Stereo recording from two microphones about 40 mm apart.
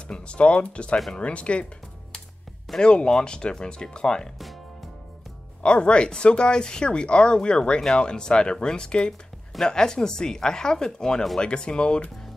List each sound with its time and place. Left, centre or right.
0.1 s speech: left
2.8 s speech: left
5.6 s speech: left